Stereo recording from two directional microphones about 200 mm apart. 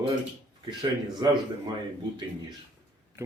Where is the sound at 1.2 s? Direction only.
20° right (ahead or behind).